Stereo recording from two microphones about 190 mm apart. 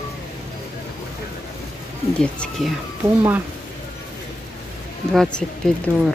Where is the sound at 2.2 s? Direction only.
5° left (ahead or behind).